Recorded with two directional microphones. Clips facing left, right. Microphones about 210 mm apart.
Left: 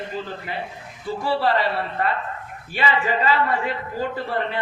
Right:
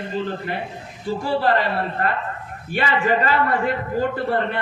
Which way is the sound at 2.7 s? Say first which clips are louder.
Right 3 dB; 55° right (ahead or behind).